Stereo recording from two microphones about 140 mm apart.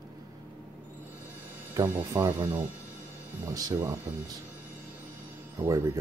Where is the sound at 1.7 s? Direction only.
20° right (ahead or behind).